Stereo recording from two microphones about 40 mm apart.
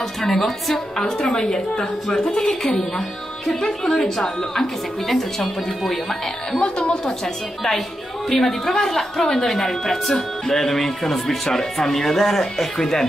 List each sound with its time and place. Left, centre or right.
0.3 s speech: centre
6.6 s a woman's voice: left
8.3 s speech: centre